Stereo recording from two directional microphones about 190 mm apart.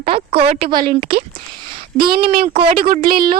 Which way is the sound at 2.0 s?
55° right (ahead or behind).